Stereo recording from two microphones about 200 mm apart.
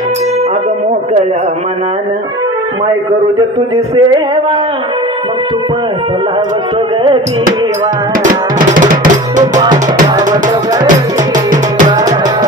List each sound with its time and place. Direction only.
3.3 s speech: 20° right (ahead or behind)
8.2 s music: 40° right (ahead or behind)
9.6 s speech: 20° right (ahead or behind)
11.3 s music: 40° right (ahead or behind)